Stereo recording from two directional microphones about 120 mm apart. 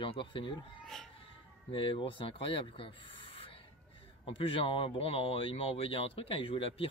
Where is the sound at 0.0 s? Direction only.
45° left (ahead or behind).